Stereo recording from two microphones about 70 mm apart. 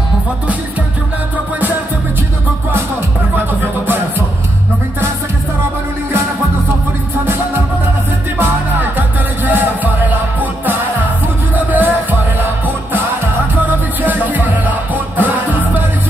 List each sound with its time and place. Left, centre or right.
8.4 s music: right